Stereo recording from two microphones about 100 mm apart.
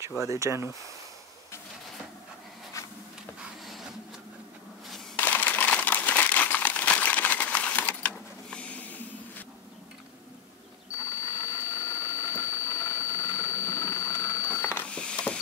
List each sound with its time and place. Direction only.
0.3 s speech: 30° right (ahead or behind)
5.1 s crumpling: 15° left (ahead or behind)
11.0 s a sound: 30° left (ahead or behind)
14.8 s mechanisms: 10° left (ahead or behind)